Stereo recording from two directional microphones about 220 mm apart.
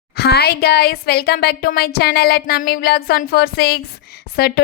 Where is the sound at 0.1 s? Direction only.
45° left (ahead or behind).